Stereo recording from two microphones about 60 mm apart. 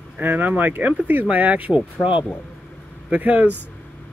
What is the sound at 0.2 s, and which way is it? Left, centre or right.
Speech, right.